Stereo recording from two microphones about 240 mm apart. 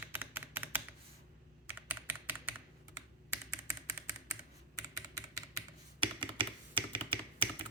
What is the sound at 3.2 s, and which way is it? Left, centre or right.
Typing, centre.